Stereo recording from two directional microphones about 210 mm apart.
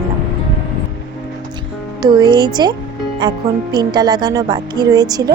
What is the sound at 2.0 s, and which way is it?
Speech, 20° right (ahead or behind).